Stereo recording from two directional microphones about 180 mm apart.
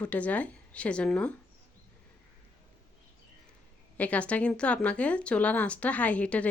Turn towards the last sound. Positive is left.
turn(degrees=5)  # may be behind; listen again after turning